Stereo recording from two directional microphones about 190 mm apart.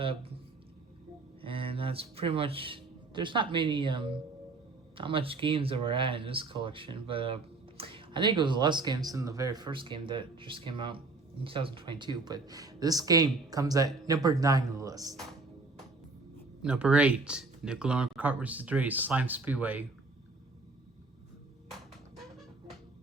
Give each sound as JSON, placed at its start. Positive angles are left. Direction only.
{"t": 0.0, "sound": "speech", "side_deg": -30}
{"t": 1.4, "sound": "speech", "side_deg": -30}
{"t": 16.6, "sound": "speech", "side_deg": -5}